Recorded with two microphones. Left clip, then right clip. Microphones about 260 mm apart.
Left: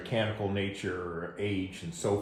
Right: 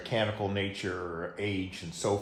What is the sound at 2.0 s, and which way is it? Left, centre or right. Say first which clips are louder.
Speech: even; right.